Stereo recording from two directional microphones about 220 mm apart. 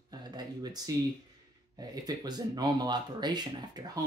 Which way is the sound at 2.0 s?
20° right (ahead or behind).